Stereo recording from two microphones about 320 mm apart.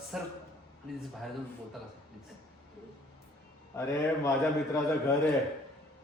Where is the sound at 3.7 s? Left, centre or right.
Centre.